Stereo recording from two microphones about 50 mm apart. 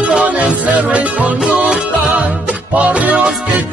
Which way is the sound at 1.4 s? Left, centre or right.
Centre.